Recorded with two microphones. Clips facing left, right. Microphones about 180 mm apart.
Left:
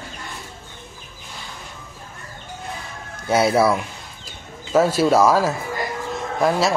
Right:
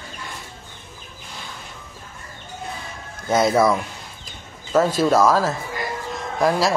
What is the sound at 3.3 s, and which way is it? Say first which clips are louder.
A man's voice: even; 10° left (ahead or behind).